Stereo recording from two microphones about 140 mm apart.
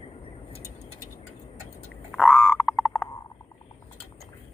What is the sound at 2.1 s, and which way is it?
Frog, 5° left (ahead or behind).